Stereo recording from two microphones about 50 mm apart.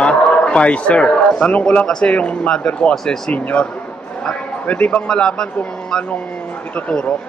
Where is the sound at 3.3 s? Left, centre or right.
Left.